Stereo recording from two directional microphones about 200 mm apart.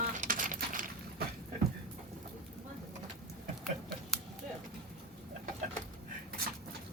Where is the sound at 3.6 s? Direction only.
Centre (ahead or behind).